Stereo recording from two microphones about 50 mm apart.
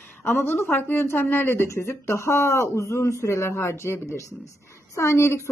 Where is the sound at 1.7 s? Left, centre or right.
Left.